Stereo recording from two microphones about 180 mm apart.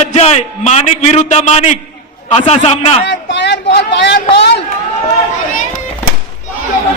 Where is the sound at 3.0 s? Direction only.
70° left (ahead or behind).